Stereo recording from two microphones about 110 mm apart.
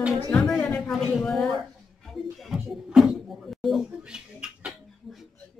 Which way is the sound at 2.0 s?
Centre (ahead or behind).